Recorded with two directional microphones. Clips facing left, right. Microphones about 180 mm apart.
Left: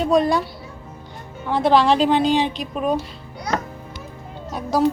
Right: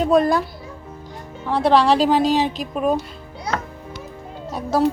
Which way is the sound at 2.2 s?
40° right (ahead or behind).